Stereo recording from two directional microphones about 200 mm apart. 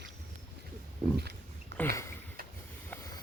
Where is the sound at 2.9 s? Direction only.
15° left (ahead or behind).